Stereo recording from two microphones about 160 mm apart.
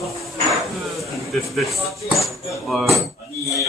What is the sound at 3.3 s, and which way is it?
Speech, 20° left (ahead or behind).